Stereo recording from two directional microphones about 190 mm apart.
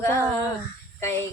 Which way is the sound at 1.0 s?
15° left (ahead or behind).